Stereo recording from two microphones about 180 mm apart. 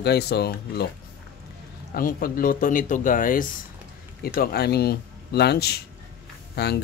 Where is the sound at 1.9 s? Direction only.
55° left (ahead or behind).